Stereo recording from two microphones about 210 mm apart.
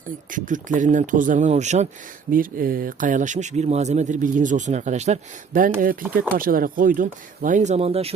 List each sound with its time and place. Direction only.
0.3 s speech: 40° right (ahead or behind)